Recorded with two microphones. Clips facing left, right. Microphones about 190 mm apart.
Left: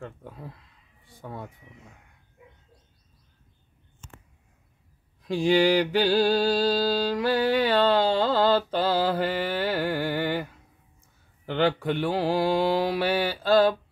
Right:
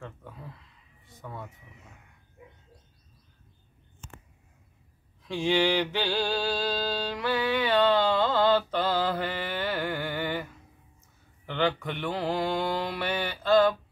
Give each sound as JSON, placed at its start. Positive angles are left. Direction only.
{"t": 0.0, "sound": "speech", "side_deg": 35}
{"t": 1.2, "sound": "mantra", "side_deg": 30}
{"t": 5.2, "sound": "mantra", "side_deg": 35}
{"t": 11.5, "sound": "mantra", "side_deg": 35}